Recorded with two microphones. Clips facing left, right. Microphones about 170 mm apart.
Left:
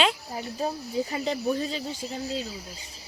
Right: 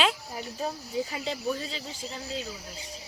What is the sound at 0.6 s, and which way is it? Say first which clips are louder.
Speech: left 3 dB; 40° left (ahead or behind).